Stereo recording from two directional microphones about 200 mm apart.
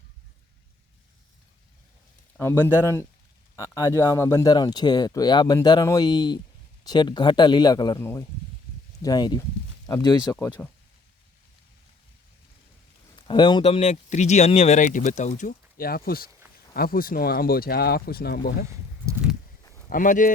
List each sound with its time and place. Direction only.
2.4 s speech: 10° left (ahead or behind)
10.6 s speech: 5° left (ahead or behind)
13.1 s speech: 25° left (ahead or behind); by 18.5 s 50° left (ahead or behind)
19.9 s speech: 40° left (ahead or behind)